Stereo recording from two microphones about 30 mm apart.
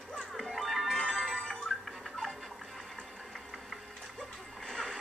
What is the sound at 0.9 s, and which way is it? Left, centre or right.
Music, centre.